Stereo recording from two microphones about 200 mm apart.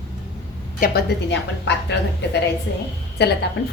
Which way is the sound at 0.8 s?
55° left (ahead or behind).